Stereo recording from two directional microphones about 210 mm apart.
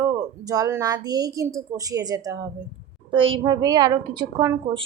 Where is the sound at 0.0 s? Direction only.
15° right (ahead or behind).